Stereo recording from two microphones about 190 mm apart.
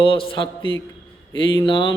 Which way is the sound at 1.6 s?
25° left (ahead or behind).